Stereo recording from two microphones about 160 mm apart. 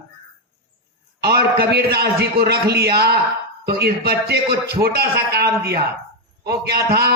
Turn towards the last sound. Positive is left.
turn(degrees=-80)